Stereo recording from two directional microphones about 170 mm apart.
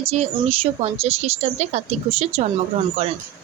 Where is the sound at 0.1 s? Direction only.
35° right (ahead or behind).